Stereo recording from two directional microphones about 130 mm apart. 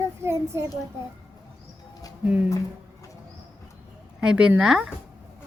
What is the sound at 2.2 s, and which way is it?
Speech, 10° right (ahead or behind).